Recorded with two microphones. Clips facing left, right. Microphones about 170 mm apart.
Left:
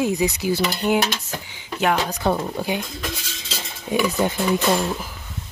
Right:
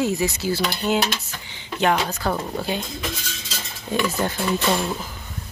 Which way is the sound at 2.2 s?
20° left (ahead or behind).